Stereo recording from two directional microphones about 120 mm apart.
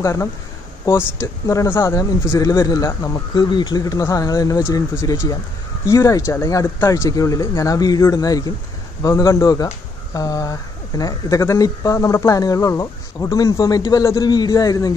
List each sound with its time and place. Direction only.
0.0 s speech: 25° left (ahead or behind)
3.3 s speech: 40° left (ahead or behind)